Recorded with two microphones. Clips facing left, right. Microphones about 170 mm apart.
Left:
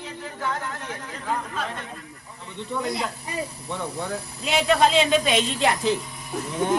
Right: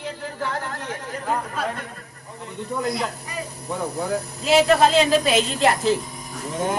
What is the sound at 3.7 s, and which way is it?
Speech, 40° right (ahead or behind).